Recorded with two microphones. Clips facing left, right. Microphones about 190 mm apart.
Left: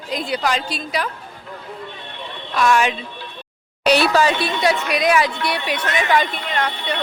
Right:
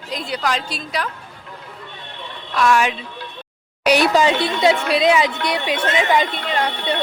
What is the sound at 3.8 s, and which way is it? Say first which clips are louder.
A woman's voice: right 1 dB; 15° right (ahead or behind).